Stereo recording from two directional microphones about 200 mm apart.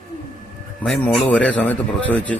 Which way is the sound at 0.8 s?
5° left (ahead or behind).